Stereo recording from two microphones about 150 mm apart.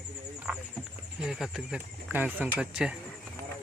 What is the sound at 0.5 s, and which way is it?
Speech, 5° right (ahead or behind).